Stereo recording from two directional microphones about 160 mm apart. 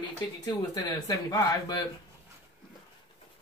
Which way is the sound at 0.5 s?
25° left (ahead or behind).